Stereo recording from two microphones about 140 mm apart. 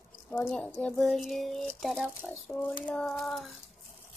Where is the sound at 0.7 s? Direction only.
5° left (ahead or behind).